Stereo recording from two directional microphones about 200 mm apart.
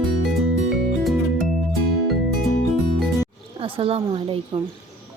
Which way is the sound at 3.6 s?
25° right (ahead or behind).